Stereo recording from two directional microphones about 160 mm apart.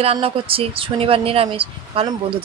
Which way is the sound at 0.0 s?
35° right (ahead or behind).